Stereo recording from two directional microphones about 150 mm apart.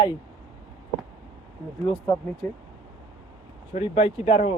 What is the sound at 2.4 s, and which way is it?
Speech, 10° left (ahead or behind).